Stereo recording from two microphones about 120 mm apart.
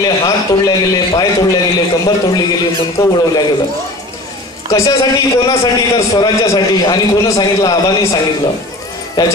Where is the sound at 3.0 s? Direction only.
25° left (ahead or behind).